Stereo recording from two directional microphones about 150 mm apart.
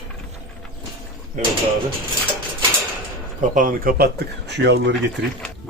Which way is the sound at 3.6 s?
70° right (ahead or behind).